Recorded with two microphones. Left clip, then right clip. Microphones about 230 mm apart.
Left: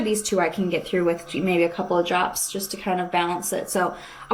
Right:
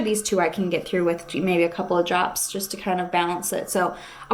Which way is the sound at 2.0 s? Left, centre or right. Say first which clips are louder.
Even; right.